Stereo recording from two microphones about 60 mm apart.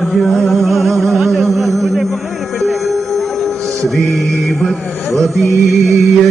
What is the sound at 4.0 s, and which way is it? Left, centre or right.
Mantra, centre.